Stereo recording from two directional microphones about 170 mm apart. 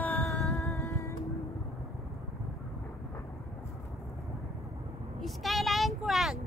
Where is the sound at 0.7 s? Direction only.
20° left (ahead or behind).